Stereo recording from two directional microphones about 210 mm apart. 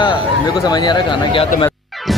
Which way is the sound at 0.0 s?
20° left (ahead or behind).